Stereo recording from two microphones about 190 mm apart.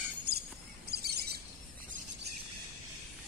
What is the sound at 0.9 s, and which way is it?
Bird, 55° right (ahead or behind).